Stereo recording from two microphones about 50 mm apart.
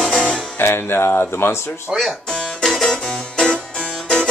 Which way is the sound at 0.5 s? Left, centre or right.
Left.